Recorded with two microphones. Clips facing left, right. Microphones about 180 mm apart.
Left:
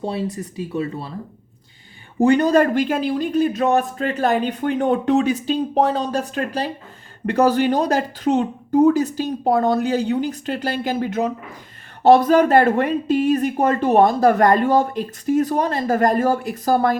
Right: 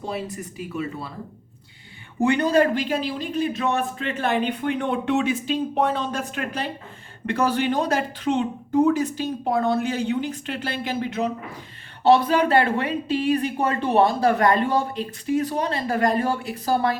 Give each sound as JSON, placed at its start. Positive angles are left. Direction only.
{"t": 0.0, "sound": "speech", "side_deg": 30}
{"t": 2.1, "sound": "speech", "side_deg": 40}